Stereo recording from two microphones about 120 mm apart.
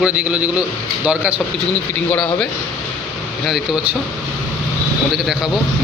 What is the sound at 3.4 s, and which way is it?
Speech, 5° right (ahead or behind).